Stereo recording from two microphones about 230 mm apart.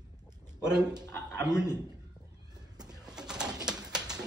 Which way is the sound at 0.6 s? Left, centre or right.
Centre.